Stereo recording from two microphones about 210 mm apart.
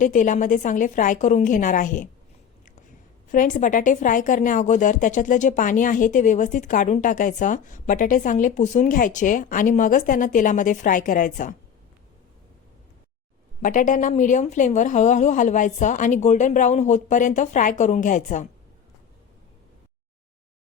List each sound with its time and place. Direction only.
0.0 s a woman's voice: 35° left (ahead or behind)
3.3 s a woman's voice: 40° left (ahead or behind)
13.6 s a woman's voice: 40° left (ahead or behind)